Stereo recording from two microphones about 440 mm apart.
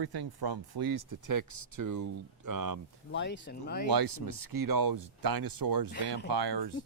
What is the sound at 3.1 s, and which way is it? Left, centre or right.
Speech, left.